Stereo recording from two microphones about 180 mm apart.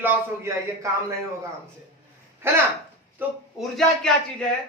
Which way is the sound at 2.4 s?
15° right (ahead or behind).